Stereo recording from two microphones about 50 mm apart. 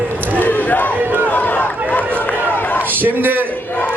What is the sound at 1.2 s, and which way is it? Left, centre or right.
Run, left.